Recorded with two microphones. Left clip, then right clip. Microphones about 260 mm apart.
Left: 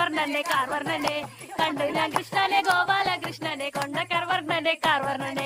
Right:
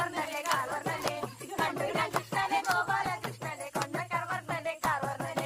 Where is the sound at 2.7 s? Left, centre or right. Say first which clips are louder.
Left 7 dB; left.